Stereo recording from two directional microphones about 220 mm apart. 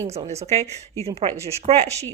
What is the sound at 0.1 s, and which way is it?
Speech, 30° right (ahead or behind).